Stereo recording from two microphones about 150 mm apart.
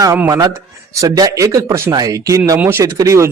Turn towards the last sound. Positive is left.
turn(degrees=-20)  # may be behind; listen again after turning